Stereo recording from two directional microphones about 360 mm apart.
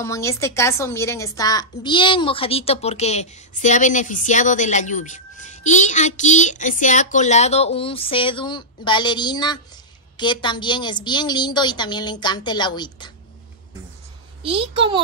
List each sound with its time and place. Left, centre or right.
0.0 s a woman's voice: centre
14.4 s a child's voice: centre